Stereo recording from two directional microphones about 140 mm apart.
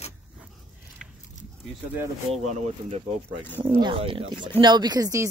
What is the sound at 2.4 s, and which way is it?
Speech, 55° right (ahead or behind).